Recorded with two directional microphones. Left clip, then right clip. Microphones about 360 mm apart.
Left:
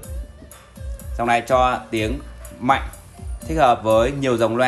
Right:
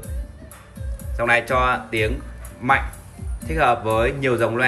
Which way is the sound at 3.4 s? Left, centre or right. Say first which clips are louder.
Left 3 dB; centre.